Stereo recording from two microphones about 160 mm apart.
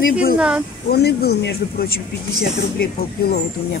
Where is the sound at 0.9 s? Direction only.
85° left.